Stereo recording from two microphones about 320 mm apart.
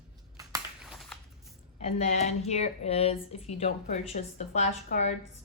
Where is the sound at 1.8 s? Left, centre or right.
Centre.